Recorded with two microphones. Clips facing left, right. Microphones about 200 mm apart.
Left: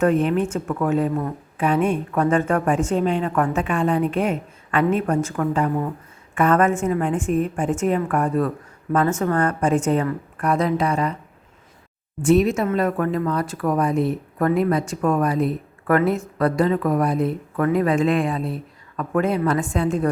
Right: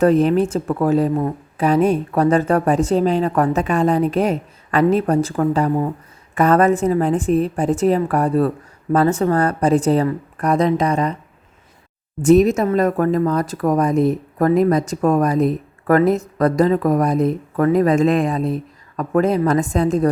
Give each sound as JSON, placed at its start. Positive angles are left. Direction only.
{"t": 0.0, "sound": "speech", "side_deg": -35}
{"t": 12.2, "sound": "speech", "side_deg": -40}